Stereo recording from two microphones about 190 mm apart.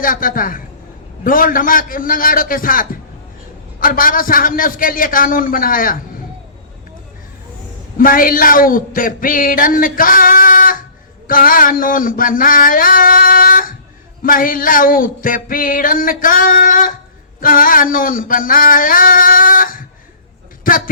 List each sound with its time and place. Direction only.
0.0 s speech: 45° left (ahead or behind)
7.9 s speech: 50° left (ahead or behind)